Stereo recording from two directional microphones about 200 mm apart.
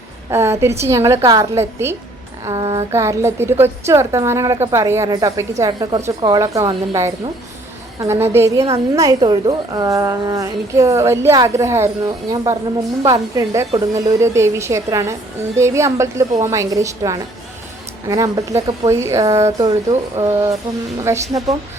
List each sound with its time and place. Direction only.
0.3 s a woman's voice: 15° right (ahead or behind)